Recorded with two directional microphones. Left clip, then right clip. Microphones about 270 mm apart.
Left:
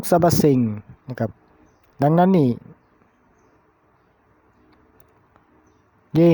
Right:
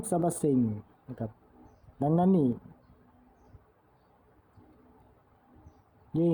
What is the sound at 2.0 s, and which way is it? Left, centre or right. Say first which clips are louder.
Speech: left 10 dB; left.